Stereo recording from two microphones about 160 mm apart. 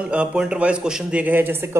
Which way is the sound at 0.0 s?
5° right (ahead or behind).